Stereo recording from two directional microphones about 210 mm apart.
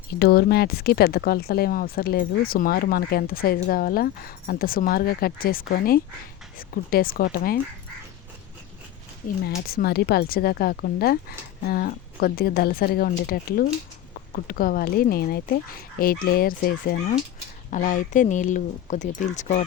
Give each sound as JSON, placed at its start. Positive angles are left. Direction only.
{"t": 0.2, "sound": "speech", "side_deg": 50}
{"t": 9.4, "sound": "speech", "side_deg": 50}